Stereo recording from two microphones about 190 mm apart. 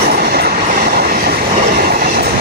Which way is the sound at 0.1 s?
50° right (ahead or behind).